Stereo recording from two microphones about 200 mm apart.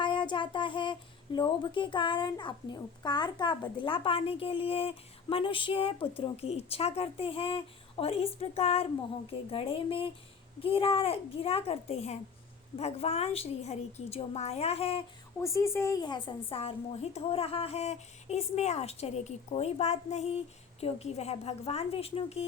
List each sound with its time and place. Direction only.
0.0 s child singing: 25° left (ahead or behind)
1.4 s a woman's voice: 25° left (ahead or behind)
15.4 s a woman's voice: 15° left (ahead or behind); by 22.4 s 30° left (ahead or behind)